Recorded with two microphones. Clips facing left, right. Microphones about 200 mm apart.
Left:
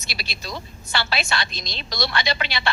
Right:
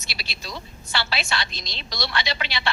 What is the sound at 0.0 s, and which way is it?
A woman's voice, 50° left (ahead or behind).